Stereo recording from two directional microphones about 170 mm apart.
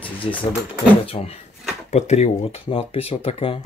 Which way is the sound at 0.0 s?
30° left (ahead or behind).